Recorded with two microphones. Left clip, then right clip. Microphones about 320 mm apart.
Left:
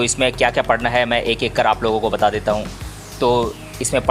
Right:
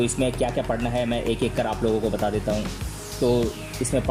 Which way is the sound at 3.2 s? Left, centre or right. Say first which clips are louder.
Left 6 dB; left.